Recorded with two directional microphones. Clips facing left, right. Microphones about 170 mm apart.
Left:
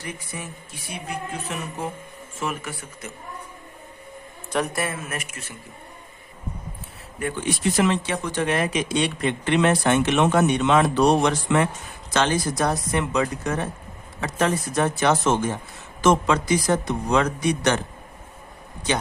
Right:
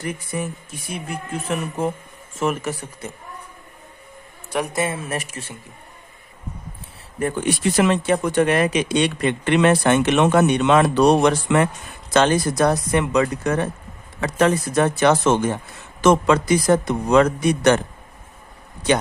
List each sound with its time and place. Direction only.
0.0 s speech: 50° right (ahead or behind)
2.4 s speech: 45° right (ahead or behind)
4.5 s speech: 15° right (ahead or behind); by 5.5 s 35° right (ahead or behind)
7.4 s speech: 60° right (ahead or behind)